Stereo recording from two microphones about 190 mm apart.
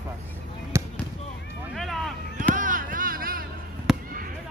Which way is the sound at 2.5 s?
45° right (ahead or behind).